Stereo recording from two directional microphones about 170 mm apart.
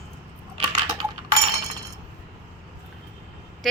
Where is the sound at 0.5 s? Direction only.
30° right (ahead or behind).